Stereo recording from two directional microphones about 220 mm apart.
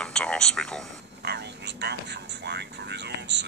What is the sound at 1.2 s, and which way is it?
Speech, 50° right (ahead or behind).